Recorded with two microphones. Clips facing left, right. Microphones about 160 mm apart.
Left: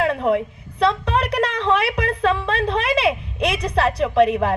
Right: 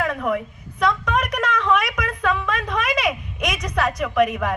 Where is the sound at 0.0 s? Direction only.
30° left (ahead or behind).